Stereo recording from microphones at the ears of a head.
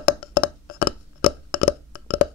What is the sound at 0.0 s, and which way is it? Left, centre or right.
Burping, left.